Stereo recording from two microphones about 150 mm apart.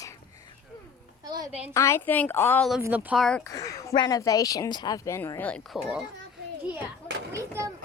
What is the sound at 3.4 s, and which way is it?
Speech, 20° left (ahead or behind).